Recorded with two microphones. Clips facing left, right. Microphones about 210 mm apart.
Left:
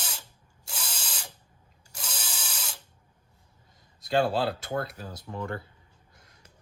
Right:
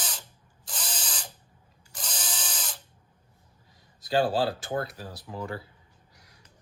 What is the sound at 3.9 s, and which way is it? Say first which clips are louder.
Speech: right 1 dB; 25° left (ahead or behind).